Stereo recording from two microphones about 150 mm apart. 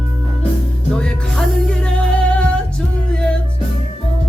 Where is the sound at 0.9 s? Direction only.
5° left (ahead or behind).